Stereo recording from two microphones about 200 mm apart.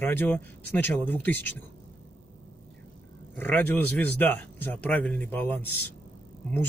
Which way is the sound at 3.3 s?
10° left (ahead or behind).